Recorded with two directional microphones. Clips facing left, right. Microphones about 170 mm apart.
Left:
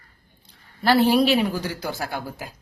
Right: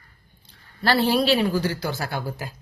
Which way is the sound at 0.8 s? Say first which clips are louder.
Left 2 dB; 15° left (ahead or behind).